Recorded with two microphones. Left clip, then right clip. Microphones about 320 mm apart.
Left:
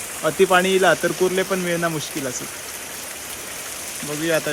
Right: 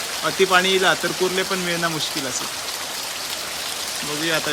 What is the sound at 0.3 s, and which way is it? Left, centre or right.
Speech, centre.